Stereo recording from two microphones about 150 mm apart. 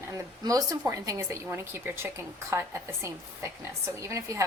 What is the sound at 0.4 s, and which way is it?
A woman's voice, 25° right (ahead or behind).